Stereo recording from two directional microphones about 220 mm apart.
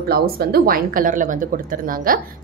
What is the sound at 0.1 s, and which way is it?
A woman's voice, 45° right (ahead or behind).